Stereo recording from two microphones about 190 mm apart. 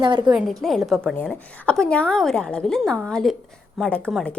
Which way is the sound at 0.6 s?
Centre (ahead or behind).